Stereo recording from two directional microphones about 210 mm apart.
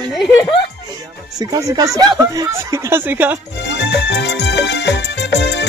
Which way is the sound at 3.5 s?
55° left (ahead or behind).